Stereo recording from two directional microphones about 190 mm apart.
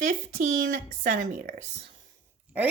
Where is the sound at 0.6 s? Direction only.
45° right (ahead or behind).